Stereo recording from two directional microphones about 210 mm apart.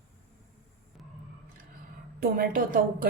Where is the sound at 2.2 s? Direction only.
45° right (ahead or behind).